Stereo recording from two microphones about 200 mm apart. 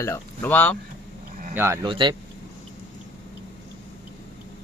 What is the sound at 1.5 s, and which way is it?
Speech, 10° right (ahead or behind).